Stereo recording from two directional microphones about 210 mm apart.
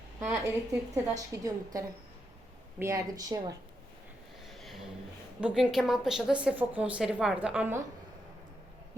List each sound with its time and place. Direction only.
0.2 s a woman's voice: 10° right (ahead or behind)
4.4 s a sound: centre (ahead or behind)
5.4 s a woman's voice: 5° right (ahead or behind)